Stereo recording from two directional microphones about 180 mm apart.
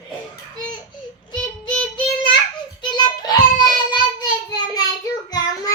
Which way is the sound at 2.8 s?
25° left (ahead or behind).